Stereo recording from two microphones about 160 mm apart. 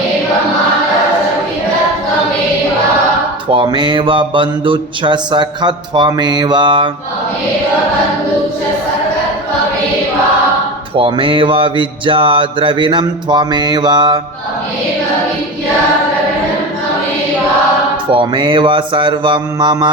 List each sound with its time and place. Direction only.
3.5 s mantra: 30° right (ahead or behind)
10.9 s a sound: 35° right (ahead or behind)
18.1 s mantra: 30° right (ahead or behind)